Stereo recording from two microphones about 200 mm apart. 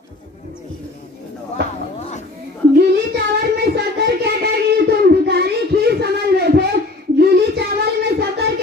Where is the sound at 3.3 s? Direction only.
55° right (ahead or behind).